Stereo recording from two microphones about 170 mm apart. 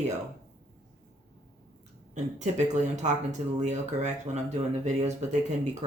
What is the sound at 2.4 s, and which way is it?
Speech, 45° right (ahead or behind).